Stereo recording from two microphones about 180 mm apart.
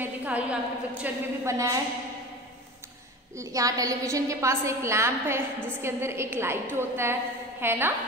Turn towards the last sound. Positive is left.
turn(degrees=-10)  # may be behind; listen again after turning